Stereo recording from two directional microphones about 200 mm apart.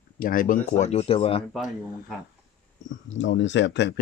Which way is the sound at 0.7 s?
35° left (ahead or behind).